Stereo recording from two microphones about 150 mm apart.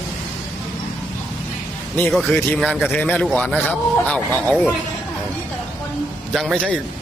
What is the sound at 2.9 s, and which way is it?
Speech, 10° left (ahead or behind).